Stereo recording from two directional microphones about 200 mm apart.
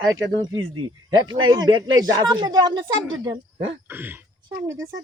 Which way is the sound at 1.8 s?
85° right.